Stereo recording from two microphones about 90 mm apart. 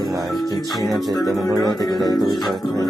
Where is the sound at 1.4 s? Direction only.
50° left (ahead or behind).